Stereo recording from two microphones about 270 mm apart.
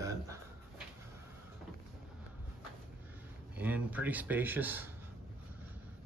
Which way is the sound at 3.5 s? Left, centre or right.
Centre.